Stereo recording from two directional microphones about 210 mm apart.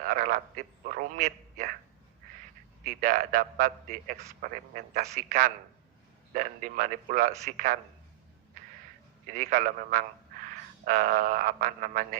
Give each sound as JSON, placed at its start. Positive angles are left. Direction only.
{"t": 0.0, "sound": "a man's voice", "side_deg": -40}
{"t": 2.8, "sound": "a man's voice", "side_deg": -40}
{"t": 9.2, "sound": "a man's voice", "side_deg": -40}